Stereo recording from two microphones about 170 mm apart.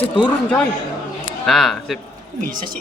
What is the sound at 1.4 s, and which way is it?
Speech, centre (ahead or behind).